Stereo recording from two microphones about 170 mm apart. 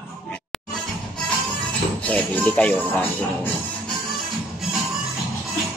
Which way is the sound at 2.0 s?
5° left (ahead or behind).